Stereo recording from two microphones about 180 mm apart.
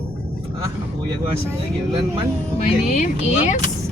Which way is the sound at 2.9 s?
40° left (ahead or behind).